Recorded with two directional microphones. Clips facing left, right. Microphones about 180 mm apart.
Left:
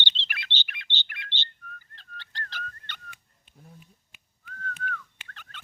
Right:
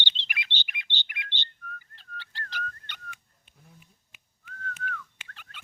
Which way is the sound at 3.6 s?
35° left (ahead or behind).